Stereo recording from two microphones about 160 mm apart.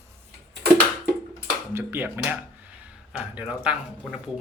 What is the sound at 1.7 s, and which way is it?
Speech, 15° right (ahead or behind).